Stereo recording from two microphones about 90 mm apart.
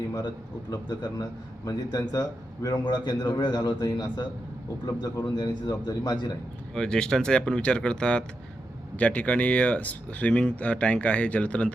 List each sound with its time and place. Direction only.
0.7 s a man's voice: 50° left (ahead or behind)
6.7 s speech: 10° left (ahead or behind)